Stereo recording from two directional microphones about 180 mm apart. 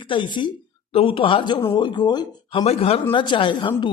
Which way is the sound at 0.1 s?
25° left (ahead or behind).